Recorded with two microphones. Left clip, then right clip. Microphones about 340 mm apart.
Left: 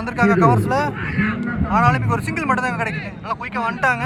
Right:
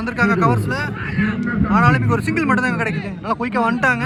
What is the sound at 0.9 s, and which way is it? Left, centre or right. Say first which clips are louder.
Speech: even; right.